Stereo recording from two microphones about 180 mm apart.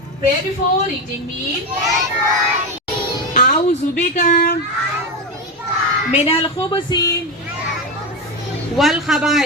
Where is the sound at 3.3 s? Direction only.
45° left (ahead or behind).